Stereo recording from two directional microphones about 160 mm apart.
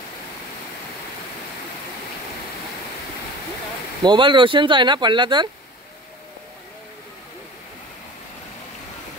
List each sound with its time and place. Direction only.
4.0 s speech: 30° right (ahead or behind)